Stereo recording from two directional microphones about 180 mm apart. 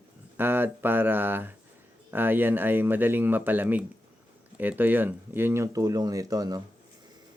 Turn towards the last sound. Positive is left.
turn(degrees=-20)  # may be behind; listen again after turning